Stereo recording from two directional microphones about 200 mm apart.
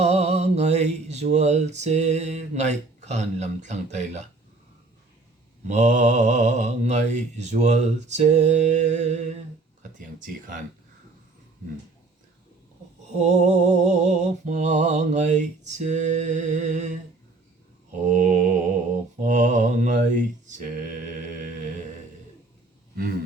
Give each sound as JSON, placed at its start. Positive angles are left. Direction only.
{"t": 0.0, "sound": "mantra", "side_deg": -30}
{"t": 5.6, "sound": "mantra", "side_deg": -35}
{"t": 13.1, "sound": "mantra", "side_deg": -35}